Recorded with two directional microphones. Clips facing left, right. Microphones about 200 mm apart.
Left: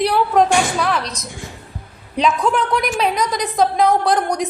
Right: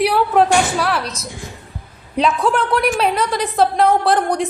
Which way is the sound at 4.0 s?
5° right (ahead or behind).